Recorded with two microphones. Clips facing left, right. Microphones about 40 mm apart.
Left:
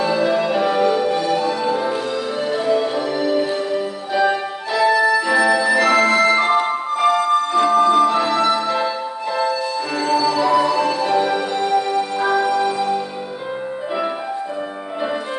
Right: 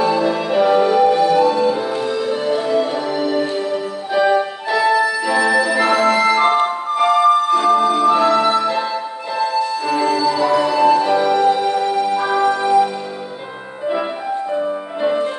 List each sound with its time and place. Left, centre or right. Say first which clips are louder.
0.0 s music: right 1 dB; centre
4.6 s music: left 2 dB; centre